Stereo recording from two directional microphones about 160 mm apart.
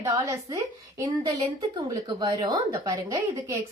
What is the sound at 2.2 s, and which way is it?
A woman's voice, 25° right (ahead or behind).